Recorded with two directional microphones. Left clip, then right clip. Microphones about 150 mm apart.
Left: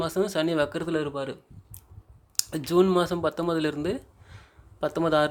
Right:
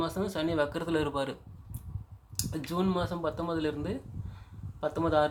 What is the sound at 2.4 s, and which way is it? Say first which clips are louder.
Speech: left 10 dB; 45° left (ahead or behind).